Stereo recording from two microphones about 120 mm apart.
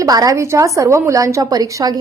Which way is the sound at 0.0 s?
30° right (ahead or behind).